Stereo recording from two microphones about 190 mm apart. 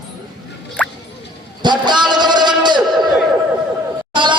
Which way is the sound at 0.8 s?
5° left (ahead or behind).